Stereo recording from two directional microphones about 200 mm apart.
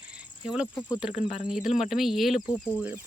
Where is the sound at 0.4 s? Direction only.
5° right (ahead or behind).